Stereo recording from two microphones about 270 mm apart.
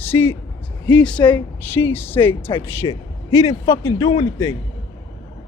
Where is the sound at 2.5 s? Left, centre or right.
Centre.